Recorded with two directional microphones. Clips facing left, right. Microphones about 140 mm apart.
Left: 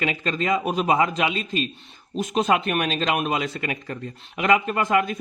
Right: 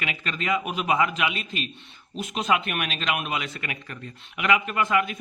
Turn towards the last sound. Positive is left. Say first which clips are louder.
# left 3 dB
turn(degrees=40)  # may be behind; listen again after turning